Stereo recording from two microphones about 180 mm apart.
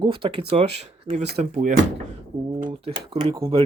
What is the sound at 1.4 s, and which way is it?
Speech, 40° right (ahead or behind).